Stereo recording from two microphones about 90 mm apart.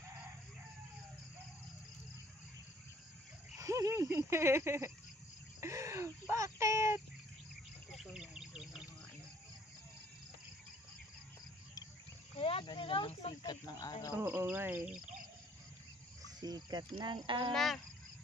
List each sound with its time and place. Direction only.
3.5 s speech: 35° right (ahead or behind)
5.6 s a sound: 35° right (ahead or behind)
8.0 s bird: 5° right (ahead or behind)
12.4 s speech: 90° left
12.6 s speech: 70° left (ahead or behind); by 13.9 s 50° left (ahead or behind)
14.1 s speech: 25° right (ahead or behind)
16.3 s speech: 50° right (ahead or behind)
16.9 s speech: 65° right (ahead or behind)
17.5 s speech: 5° left (ahead or behind)